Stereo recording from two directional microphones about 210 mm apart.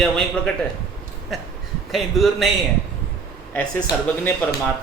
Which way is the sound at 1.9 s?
Centre (ahead or behind).